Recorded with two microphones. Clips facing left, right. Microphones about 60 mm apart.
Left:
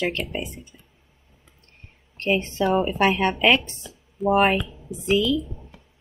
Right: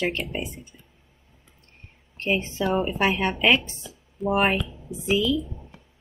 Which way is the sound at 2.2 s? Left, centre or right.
Centre.